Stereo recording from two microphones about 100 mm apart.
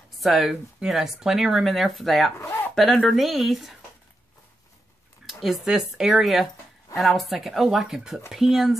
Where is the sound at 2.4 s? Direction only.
20° left (ahead or behind).